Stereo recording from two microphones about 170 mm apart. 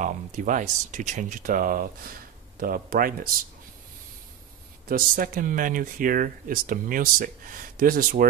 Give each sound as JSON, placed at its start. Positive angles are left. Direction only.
{"t": 0.0, "sound": "speech", "side_deg": -50}
{"t": 4.8, "sound": "speech", "side_deg": -55}